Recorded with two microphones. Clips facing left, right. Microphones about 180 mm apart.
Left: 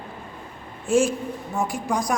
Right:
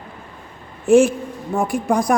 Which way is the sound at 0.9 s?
60° right (ahead or behind).